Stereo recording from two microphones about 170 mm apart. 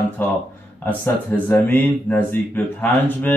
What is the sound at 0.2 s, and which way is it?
Speech, 10° left (ahead or behind).